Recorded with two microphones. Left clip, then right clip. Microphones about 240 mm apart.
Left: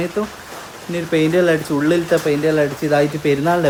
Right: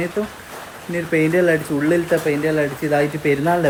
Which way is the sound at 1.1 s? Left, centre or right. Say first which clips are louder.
Left 1 dB; centre.